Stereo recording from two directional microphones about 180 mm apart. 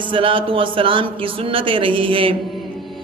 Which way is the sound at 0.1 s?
30° right (ahead or behind).